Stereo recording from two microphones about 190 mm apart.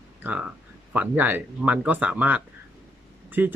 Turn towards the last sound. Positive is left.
turn(degrees=-10)  # may be behind; listen again after turning